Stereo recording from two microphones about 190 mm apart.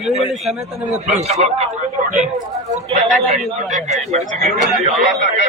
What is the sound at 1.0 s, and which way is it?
Speech, 35° right (ahead or behind).